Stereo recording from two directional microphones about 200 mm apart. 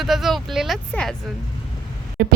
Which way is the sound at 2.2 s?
50° right (ahead or behind).